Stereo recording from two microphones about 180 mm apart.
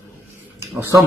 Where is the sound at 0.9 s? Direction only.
15° right (ahead or behind).